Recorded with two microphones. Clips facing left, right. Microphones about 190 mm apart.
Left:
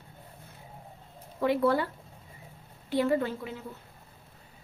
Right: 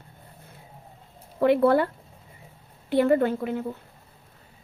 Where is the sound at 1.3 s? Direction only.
60° right (ahead or behind).